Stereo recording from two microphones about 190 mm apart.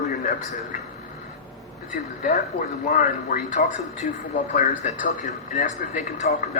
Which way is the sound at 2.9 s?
40° left (ahead or behind).